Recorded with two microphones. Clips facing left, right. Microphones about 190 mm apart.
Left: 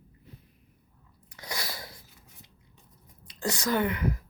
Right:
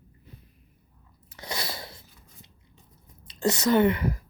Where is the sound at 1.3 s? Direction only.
25° right (ahead or behind).